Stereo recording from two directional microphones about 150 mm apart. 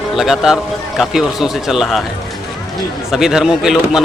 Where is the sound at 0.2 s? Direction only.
Centre (ahead or behind).